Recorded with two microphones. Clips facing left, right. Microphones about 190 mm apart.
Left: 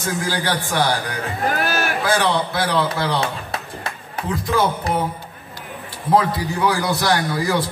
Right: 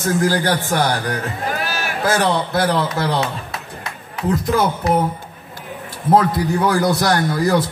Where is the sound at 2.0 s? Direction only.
45° right (ahead or behind).